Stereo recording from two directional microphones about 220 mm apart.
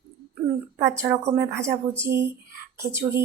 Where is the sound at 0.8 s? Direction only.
15° right (ahead or behind).